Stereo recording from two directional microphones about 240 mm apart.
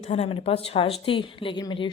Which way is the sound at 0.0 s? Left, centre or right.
Left.